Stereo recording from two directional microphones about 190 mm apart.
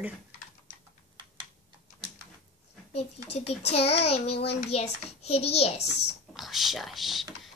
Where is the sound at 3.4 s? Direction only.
35° left (ahead or behind).